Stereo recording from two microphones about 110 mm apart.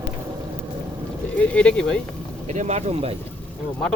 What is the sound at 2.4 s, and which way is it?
Speech, 90° right.